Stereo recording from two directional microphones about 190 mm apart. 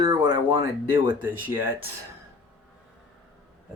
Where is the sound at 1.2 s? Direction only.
10° right (ahead or behind).